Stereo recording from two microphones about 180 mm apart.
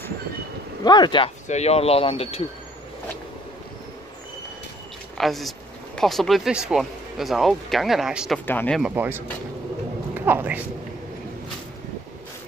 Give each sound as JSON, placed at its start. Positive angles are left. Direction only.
{"t": 0.8, "sound": "speech", "side_deg": 25}
{"t": 1.5, "sound": "speech", "side_deg": 35}
{"t": 5.1, "sound": "speech", "side_deg": 0}
{"t": 8.5, "sound": "speech", "side_deg": 10}
{"t": 8.9, "sound": "speech", "side_deg": -10}